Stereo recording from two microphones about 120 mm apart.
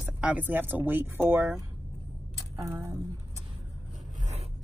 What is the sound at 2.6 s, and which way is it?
Speech, 25° right (ahead or behind).